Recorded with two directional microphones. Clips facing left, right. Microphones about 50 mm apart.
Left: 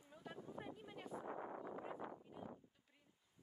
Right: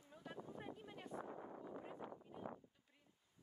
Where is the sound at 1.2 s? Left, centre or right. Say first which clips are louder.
Left 4 dB; left.